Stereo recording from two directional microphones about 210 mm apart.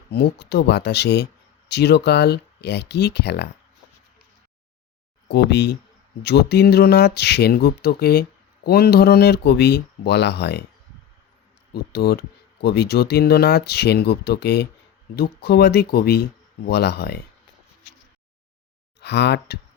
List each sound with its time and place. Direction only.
0.1 s speech: 50° left (ahead or behind)
5.3 s speech: 55° left (ahead or behind)
11.7 s speech: 50° left (ahead or behind)
18.9 s speech: 55° left (ahead or behind)